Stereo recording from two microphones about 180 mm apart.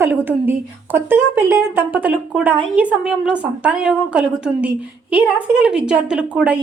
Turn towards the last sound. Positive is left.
turn(degrees=-5)  # may be behind; listen again after turning